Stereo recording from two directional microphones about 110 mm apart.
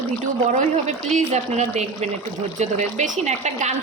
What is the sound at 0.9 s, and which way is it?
Speech, 85° right.